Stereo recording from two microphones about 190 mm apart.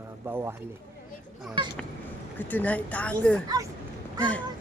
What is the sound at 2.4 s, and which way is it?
Speech, 10° left (ahead or behind).